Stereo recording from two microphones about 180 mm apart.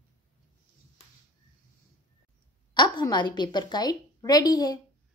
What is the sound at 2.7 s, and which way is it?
A woman's voice, 25° left (ahead or behind).